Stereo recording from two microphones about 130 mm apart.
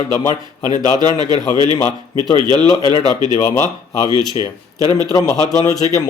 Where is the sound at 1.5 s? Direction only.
35° right (ahead or behind).